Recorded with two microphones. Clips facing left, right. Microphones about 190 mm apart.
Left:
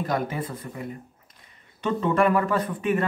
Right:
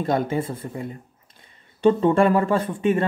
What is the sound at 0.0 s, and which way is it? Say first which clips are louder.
Speech: right 5 dB; 25° right (ahead or behind).